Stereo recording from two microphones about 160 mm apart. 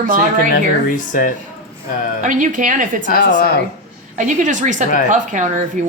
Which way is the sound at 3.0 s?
60° left (ahead or behind).